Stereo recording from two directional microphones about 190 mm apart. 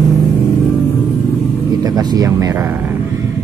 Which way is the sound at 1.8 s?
20° right (ahead or behind).